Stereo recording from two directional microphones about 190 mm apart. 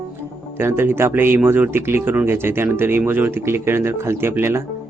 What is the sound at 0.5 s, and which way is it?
Speech, 10° right (ahead or behind).